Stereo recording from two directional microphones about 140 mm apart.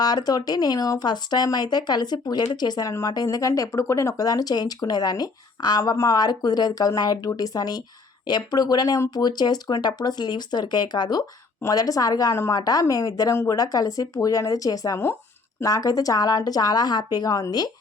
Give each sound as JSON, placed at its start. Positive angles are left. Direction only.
{"t": 0.0, "sound": "speech", "side_deg": 30}